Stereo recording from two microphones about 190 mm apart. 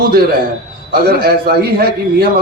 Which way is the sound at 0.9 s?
55° right (ahead or behind).